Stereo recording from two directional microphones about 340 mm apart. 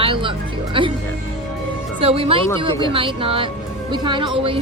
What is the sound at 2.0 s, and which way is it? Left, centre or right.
A woman's voice, centre.